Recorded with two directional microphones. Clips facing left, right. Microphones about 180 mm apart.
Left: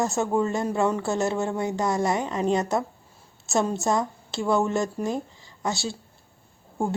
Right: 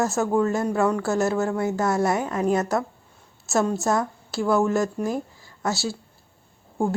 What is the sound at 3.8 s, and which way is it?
Speech, 20° left (ahead or behind).